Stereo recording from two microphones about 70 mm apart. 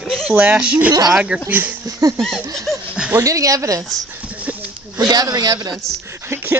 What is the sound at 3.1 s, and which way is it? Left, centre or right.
Speech, right.